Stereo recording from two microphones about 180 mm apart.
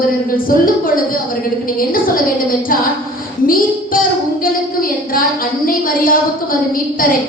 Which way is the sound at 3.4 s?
50° left (ahead or behind).